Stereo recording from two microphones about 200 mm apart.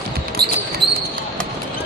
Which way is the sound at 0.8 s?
55° right (ahead or behind).